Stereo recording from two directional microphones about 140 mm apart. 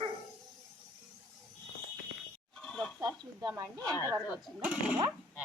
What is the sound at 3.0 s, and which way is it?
Speech, 25° right (ahead or behind).